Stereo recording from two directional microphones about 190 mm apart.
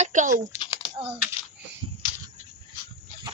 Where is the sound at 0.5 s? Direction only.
25° left (ahead or behind).